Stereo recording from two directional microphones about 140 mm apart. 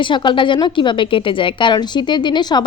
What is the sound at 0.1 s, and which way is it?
A woman's voice, 35° left (ahead or behind).